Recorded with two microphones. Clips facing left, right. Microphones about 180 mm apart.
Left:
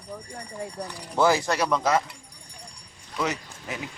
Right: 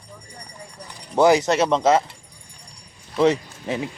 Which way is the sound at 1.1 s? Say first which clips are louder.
Right 6 dB; 20° right (ahead or behind).